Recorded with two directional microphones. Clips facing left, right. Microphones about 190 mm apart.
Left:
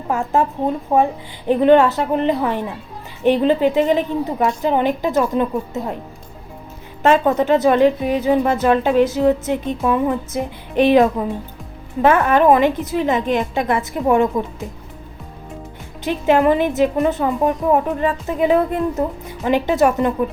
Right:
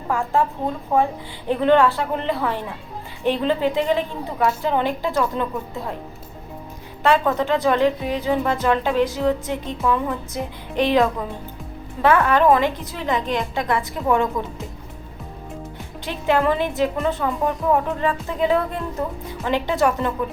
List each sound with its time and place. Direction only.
0.1 s speech: 20° left (ahead or behind)
7.1 s speech: 20° left (ahead or behind)
16.0 s a woman's voice: 20° left (ahead or behind)